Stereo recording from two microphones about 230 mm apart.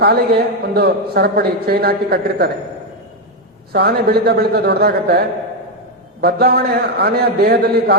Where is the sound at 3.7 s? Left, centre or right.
Right.